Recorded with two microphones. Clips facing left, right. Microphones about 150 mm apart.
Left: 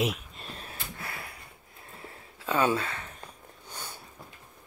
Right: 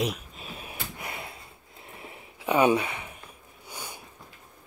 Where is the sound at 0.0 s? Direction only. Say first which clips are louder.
Even; centre (ahead or behind).